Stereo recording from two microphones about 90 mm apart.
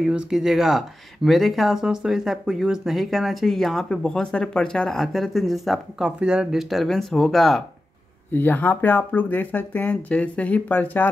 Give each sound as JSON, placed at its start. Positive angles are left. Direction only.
{"t": 0.0, "sound": "speech", "side_deg": -5}
{"t": 6.7, "sound": "speech", "side_deg": 0}
{"t": 8.3, "sound": "speech", "side_deg": 20}